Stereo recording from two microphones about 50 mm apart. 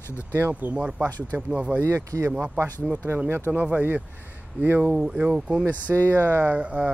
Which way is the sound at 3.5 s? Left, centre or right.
Right.